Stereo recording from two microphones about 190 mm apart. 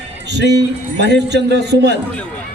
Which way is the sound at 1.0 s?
60° right (ahead or behind).